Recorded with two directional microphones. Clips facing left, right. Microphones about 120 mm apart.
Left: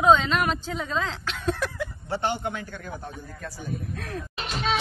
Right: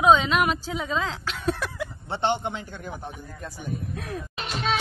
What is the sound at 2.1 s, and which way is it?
Speech, 25° right (ahead or behind).